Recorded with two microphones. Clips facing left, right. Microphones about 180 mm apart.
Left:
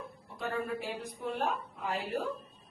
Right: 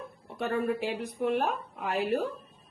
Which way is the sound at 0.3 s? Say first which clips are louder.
Right 6 dB; 65° right (ahead or behind).